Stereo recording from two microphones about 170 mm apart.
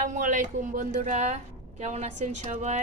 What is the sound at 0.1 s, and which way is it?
Speech, 45° right (ahead or behind).